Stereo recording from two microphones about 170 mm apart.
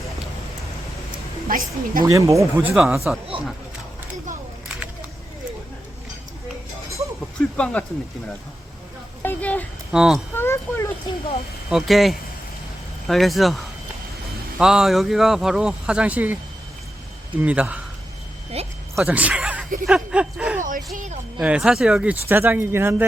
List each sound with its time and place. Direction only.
1.5 s a woman's voice: 55° right (ahead or behind)
2.0 s speech: 20° right (ahead or behind)
2.6 s speech: 5° right (ahead or behind)
3.3 s speech: 30° right (ahead or behind)
7.5 s speech: 5° left (ahead or behind)
9.2 s speech: 10° left (ahead or behind)
9.9 s speech: 5° right (ahead or behind)
10.3 s speech: 15° left (ahead or behind)
11.7 s speech: centre (ahead or behind)
14.6 s speech: 5° right (ahead or behind)
18.5 s a sound: 35° right (ahead or behind)
18.9 s speech: 10° right (ahead or behind)
20.6 s speech: 50° right (ahead or behind)
21.3 s speech: 5° right (ahead or behind)